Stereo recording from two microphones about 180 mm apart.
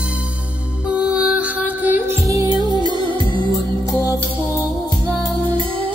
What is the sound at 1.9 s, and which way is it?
Music, 20° right (ahead or behind).